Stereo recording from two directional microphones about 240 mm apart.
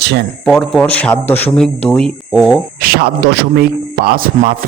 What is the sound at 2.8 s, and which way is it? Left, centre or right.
A man's voice, right.